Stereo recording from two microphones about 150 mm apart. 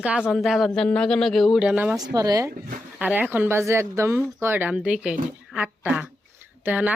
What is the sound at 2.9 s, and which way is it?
Speech, 10° right (ahead or behind).